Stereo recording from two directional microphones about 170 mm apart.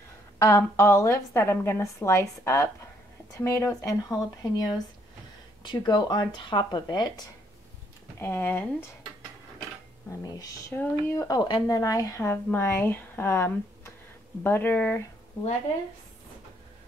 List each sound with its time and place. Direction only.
0.4 s speech: 15° left (ahead or behind)
8.2 s speech: 15° left (ahead or behind)
10.2 s speech: 20° left (ahead or behind)